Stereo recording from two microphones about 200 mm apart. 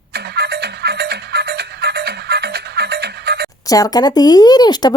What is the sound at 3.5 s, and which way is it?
Speech, 15° left (ahead or behind).